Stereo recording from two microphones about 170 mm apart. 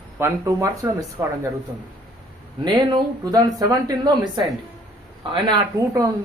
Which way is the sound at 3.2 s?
20° right (ahead or behind).